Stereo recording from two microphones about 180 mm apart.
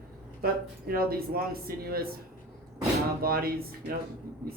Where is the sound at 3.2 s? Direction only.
55° right (ahead or behind).